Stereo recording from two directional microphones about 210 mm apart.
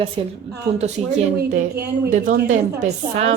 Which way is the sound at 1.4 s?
50° right (ahead or behind).